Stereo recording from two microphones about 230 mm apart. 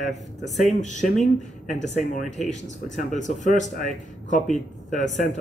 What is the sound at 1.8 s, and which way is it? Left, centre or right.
Speech, left.